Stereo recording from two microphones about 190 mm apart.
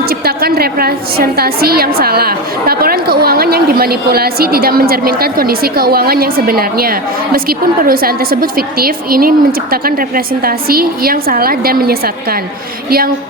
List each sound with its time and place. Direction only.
0.1 s a woman's voice: 55° right (ahead or behind)